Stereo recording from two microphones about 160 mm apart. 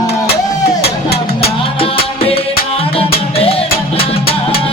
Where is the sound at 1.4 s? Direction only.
35° left (ahead or behind).